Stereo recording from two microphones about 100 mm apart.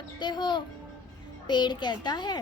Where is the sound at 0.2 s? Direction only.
45° left (ahead or behind).